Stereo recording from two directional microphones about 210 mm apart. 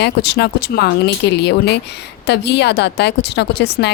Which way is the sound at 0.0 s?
50° left (ahead or behind).